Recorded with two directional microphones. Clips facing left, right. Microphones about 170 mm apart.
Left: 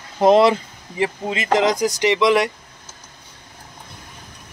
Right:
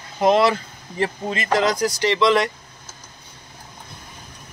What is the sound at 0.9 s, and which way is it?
Speech, 15° left (ahead or behind).